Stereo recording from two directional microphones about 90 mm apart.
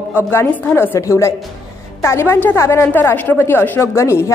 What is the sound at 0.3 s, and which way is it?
A woman's voice, 25° left (ahead or behind).